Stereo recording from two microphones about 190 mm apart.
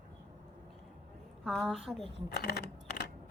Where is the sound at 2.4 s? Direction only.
60° left (ahead or behind).